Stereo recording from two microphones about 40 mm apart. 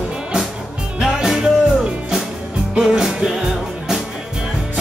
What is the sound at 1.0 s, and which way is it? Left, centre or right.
Music, centre.